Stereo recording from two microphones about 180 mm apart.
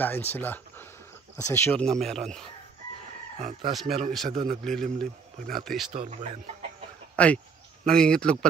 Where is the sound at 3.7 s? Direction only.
Centre (ahead or behind).